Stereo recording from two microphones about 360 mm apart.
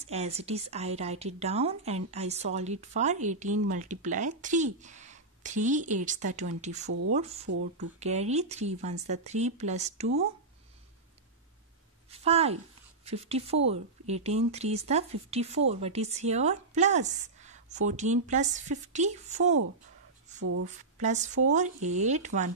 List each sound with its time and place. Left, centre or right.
0.0 s a woman's voice: centre
6.9 s speech: right
7.2 s speech: centre
12.2 s a woman's voice: centre
20.3 s speech: right
20.6 s a woman's voice: centre